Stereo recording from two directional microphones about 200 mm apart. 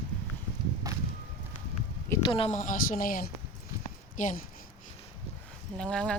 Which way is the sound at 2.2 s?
30° left (ahead or behind).